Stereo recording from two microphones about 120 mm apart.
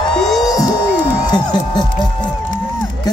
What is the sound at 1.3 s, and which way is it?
Speech, 35° left (ahead or behind).